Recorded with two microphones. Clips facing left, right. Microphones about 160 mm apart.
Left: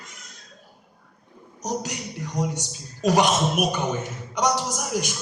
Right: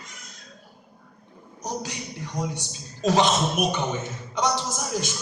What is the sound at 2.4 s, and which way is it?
A man's voice, 20° left (ahead or behind).